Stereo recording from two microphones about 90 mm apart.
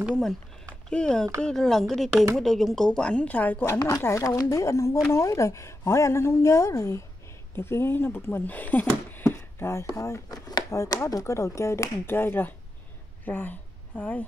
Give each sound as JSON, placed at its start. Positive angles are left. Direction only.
{"t": 0.1, "sound": "a woman's voice", "side_deg": 5}